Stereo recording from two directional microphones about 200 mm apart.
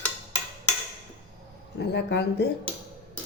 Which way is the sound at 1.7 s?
55° left (ahead or behind).